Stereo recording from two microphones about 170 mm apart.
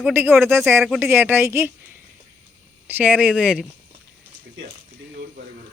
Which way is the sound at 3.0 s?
10° right (ahead or behind).